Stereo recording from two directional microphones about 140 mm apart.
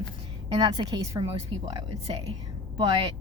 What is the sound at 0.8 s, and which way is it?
A woman's voice, 25° right (ahead or behind).